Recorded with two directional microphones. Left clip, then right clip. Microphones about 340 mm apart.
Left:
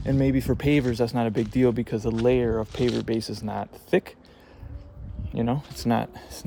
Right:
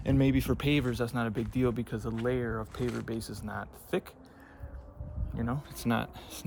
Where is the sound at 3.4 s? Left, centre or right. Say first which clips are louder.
Left 8 dB; centre.